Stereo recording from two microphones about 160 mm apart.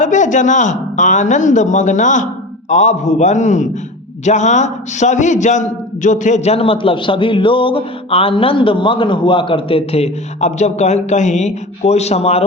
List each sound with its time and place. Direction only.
0.0 s a man's voice: 50° left (ahead or behind)